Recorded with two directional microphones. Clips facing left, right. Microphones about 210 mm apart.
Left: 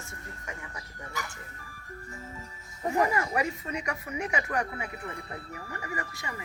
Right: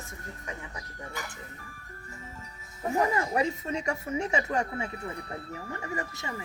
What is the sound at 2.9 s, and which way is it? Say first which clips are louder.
Speech: right 1 dB; 20° right (ahead or behind).